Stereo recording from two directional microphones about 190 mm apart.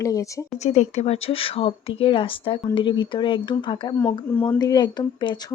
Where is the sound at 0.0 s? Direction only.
15° left (ahead or behind).